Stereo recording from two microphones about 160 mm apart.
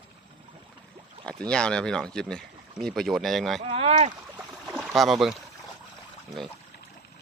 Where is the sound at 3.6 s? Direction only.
40° right (ahead or behind).